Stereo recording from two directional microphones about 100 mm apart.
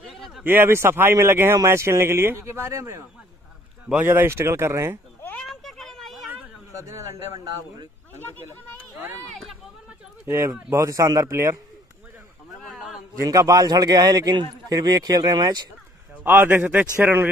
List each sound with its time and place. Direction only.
0.0 s a sound: centre (ahead or behind)
0.4 s speech: 20° right (ahead or behind)
5.4 s a sound: 5° left (ahead or behind)
6.7 s a man's voice: 35° right (ahead or behind)
8.2 s speech: 20° left (ahead or behind)
10.2 s speech: 30° right (ahead or behind)
12.6 s a sound: 5° right (ahead or behind)
13.2 s a man's voice: 35° right (ahead or behind)
16.3 s speech: 20° right (ahead or behind)